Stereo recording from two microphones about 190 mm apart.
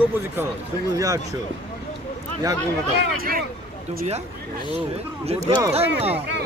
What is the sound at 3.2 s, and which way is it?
Speech, 50° right (ahead or behind).